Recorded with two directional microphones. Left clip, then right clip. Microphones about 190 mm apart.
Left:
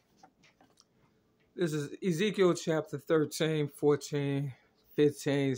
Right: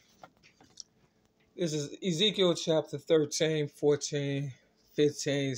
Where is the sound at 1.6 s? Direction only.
30° left (ahead or behind).